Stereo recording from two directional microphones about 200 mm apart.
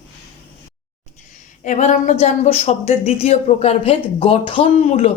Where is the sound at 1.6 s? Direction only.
40° left (ahead or behind).